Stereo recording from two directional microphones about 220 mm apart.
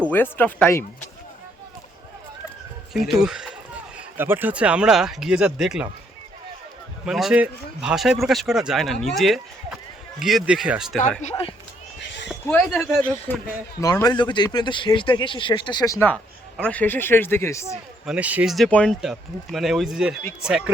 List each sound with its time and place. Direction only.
0.1 s speech: 10° left (ahead or behind)
2.9 s a man's voice: centre (ahead or behind)
7.0 s a man's voice: centre (ahead or behind)
11.2 s speech: 25° left (ahead or behind)
12.5 s a man's voice: 5° left (ahead or behind)
13.8 s speech: 15° left (ahead or behind)
18.0 s a man's voice: 5° right (ahead or behind)